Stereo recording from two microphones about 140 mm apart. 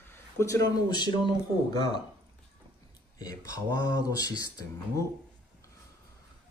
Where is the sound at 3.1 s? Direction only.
25° left (ahead or behind).